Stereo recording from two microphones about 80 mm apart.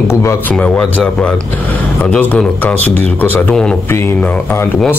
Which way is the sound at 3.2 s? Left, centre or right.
Left.